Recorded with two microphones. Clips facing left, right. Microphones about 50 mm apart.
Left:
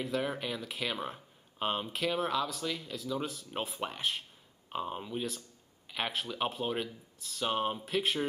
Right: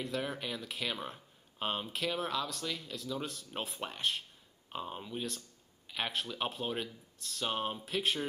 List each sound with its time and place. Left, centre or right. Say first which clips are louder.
0.0 s speech: left 3 dB; centre